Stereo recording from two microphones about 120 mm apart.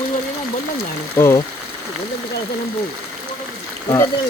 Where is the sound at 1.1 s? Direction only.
20° left (ahead or behind).